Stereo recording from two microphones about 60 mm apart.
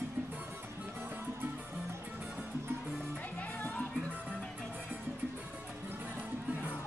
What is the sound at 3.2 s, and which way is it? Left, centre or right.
Music, left.